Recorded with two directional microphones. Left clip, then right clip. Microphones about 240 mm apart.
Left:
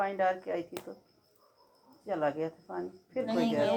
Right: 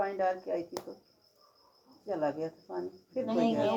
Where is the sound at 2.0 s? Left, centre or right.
Left.